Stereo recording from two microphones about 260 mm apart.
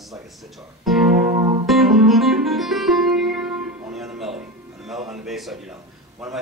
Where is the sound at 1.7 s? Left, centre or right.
Centre.